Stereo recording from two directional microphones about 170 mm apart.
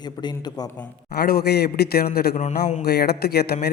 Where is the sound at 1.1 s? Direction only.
65° left (ahead or behind).